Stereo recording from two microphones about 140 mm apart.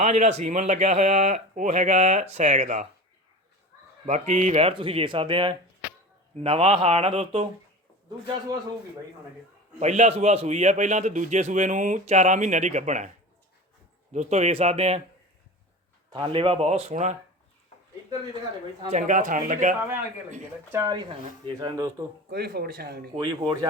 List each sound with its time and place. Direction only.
0.0 s a man's voice: 55° right (ahead or behind)
4.0 s speech: 60° right (ahead or behind)
9.8 s a man's voice: 55° right (ahead or behind)
14.1 s speech: 55° right (ahead or behind)
16.0 s speech: 40° right (ahead or behind); by 17.2 s 55° right (ahead or behind)
18.9 s a man's voice: 60° right (ahead or behind)
20.7 s speech: 30° right (ahead or behind)
22.4 s speech: 90° right
23.1 s speech: 35° right (ahead or behind)